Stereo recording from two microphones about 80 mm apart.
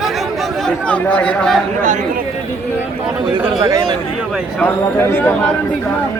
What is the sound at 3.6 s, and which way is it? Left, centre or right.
Speech, right.